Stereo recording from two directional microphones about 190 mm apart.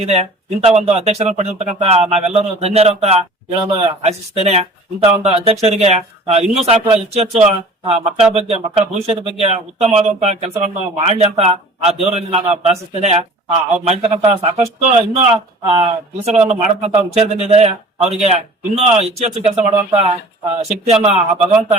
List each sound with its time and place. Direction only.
0.0 s speech: 35° right (ahead or behind)